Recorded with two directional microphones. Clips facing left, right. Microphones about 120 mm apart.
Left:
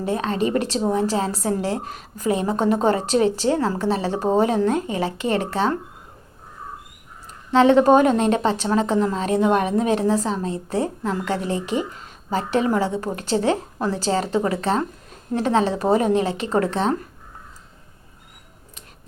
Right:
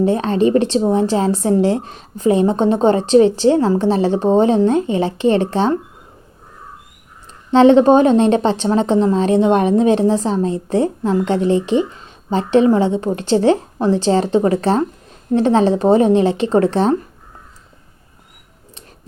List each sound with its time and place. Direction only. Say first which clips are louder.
0.0 s speech: right 8 dB; 30° right (ahead or behind)
7.5 s speech: right 5 dB; 30° right (ahead or behind)